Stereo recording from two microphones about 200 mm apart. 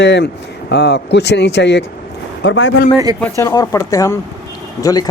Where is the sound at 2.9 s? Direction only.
20° right (ahead or behind).